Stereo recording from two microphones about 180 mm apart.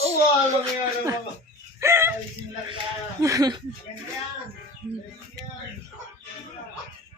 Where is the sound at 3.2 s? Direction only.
20° right (ahead or behind).